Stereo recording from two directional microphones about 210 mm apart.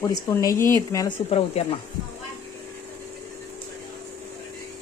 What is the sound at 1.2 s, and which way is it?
Speech, 30° left (ahead or behind).